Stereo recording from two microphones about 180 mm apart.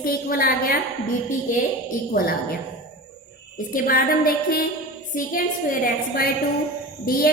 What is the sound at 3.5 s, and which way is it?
A woman's voice, 50° left (ahead or behind).